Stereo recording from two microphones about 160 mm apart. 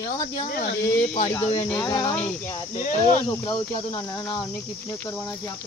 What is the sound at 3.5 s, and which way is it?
Speech, 25° left (ahead or behind).